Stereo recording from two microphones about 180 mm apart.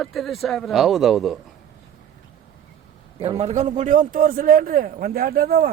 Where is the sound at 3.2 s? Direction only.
35° right (ahead or behind); by 5.7 s 55° right (ahead or behind).